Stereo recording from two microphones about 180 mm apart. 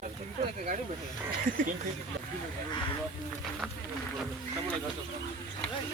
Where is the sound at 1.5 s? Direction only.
50° right (ahead or behind).